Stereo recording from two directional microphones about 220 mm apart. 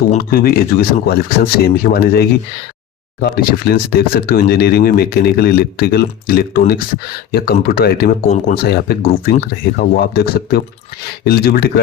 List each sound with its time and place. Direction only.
0.1 s speech: 40° left (ahead or behind)